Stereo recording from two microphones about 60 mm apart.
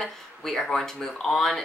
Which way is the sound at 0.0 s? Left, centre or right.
Centre.